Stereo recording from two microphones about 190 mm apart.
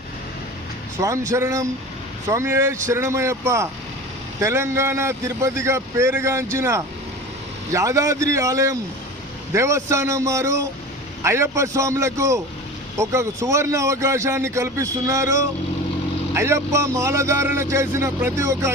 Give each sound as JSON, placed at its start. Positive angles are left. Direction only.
{"t": 0.9, "sound": "speech", "side_deg": -15}